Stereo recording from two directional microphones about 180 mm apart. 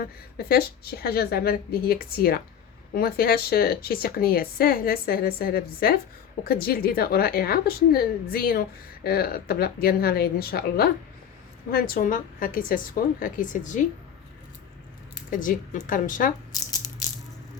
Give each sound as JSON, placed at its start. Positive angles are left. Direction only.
{"t": 0.0, "sound": "a woman's voice", "side_deg": 55}
{"t": 15.3, "sound": "speech", "side_deg": 45}
{"t": 16.5, "sound": "rattle", "side_deg": 20}